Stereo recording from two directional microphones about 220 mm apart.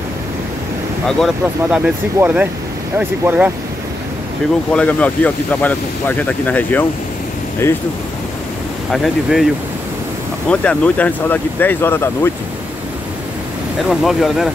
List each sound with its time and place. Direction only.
1.0 s speech: centre (ahead or behind)
4.7 s speech: 5° left (ahead or behind)
8.9 s speech: centre (ahead or behind)
10.5 s speech: 5° left (ahead or behind)
13.8 s speech: centre (ahead or behind)